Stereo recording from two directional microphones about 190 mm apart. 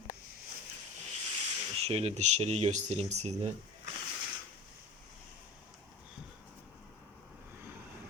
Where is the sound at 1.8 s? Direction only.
30° right (ahead or behind).